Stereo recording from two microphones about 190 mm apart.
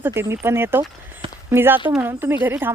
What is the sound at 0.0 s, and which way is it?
Speech, 10° right (ahead or behind).